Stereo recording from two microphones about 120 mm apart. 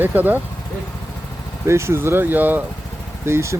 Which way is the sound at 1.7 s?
20° right (ahead or behind).